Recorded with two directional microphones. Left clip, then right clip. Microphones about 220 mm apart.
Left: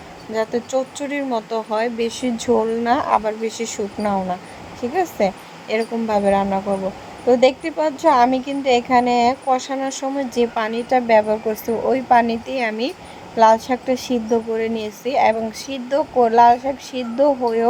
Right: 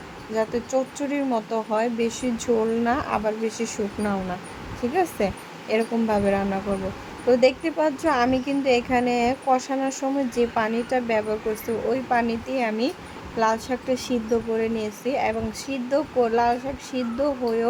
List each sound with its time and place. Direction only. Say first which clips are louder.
0.3 s speech: left 3 dB; 20° left (ahead or behind)